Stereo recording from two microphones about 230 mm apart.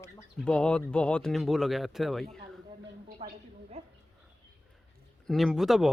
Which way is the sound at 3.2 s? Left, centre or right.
Right.